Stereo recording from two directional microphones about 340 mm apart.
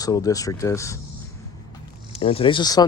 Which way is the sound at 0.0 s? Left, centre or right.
Centre.